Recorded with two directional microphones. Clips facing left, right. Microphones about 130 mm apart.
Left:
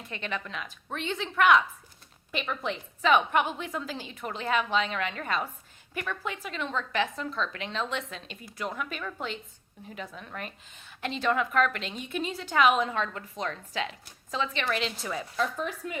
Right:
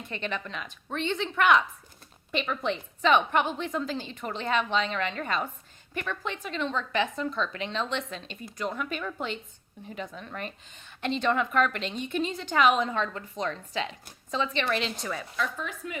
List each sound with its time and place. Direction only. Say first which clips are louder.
0.1 s a woman's voice: right 1 dB; centre (ahead or behind)
15.4 s speech: left 4 dB; 35° left (ahead or behind)